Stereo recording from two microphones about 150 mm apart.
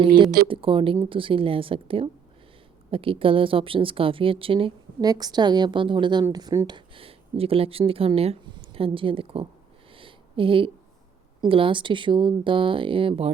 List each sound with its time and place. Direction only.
0.4 s speech: 35° right (ahead or behind)
6.7 s speech: 35° right (ahead or behind)
9.9 s a sound: 35° right (ahead or behind)
11.4 s speech: 35° right (ahead or behind)